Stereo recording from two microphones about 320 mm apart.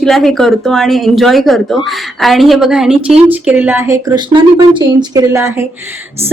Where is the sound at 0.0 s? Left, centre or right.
Centre.